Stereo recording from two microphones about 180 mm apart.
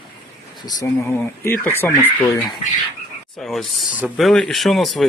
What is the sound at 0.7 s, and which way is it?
Speech, 20° left (ahead or behind).